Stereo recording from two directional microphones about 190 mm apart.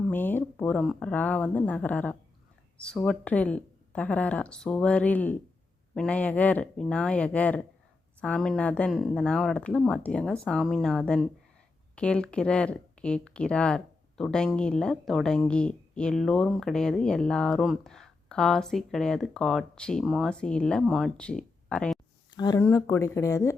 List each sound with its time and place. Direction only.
0.1 s speech: 10° left (ahead or behind)
22.3 s speech: 20° left (ahead or behind)